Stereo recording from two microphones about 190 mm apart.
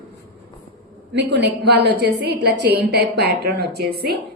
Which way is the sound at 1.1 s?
60° right (ahead or behind).